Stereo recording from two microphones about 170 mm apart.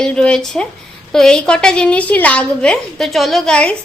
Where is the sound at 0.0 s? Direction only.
5° left (ahead or behind).